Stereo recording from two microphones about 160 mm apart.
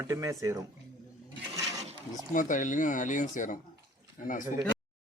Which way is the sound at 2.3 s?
55° left (ahead or behind).